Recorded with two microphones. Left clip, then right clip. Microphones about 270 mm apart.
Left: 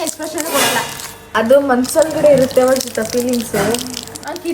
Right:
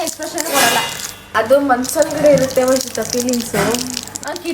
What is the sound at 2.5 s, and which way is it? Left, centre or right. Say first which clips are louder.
A woman's voice: left 2 dB; centre.